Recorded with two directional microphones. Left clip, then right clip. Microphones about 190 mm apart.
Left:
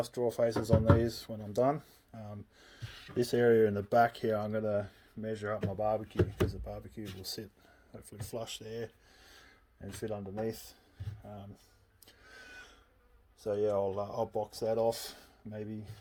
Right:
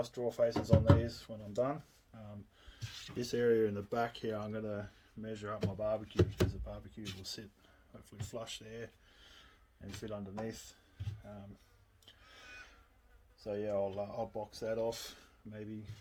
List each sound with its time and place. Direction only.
0.0 s speech: 45° left (ahead or behind)
3.2 s speech: 40° left (ahead or behind)
10.0 s speech: 35° left (ahead or behind)
13.4 s speech: 55° left (ahead or behind)